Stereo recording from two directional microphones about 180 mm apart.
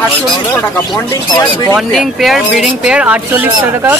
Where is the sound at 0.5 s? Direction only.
10° left (ahead or behind).